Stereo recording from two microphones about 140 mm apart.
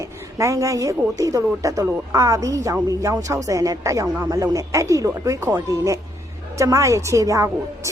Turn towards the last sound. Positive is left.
turn(degrees=-20)  # may be behind; listen again after turning